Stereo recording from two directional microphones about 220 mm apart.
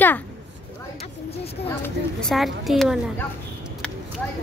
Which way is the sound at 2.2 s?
Centre (ahead or behind).